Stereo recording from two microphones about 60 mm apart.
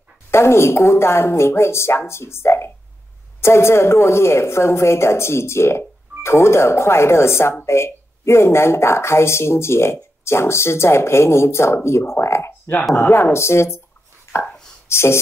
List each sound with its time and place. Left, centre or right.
0.3 s a woman's voice: left
14.3 s chopping: left
14.9 s speech: left